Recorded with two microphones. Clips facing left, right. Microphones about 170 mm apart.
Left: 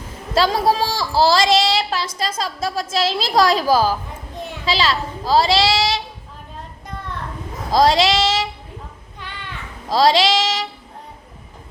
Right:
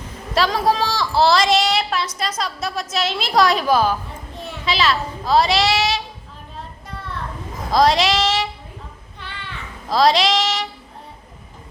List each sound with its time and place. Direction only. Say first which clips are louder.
0.3 s a woman's voice: left 1 dB; 30° left (ahead or behind)
1.2 s child singing: left 1 dB; 30° left (ahead or behind)
2.1 s a woman's voice: left 1 dB; 25° left (ahead or behind)
7.7 s child singing: left 1 dB; 25° left (ahead or behind)
9.9 s child singing: left 1 dB; 25° left (ahead or behind)